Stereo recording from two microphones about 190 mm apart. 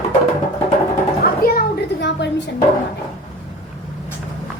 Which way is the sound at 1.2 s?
55° left (ahead or behind).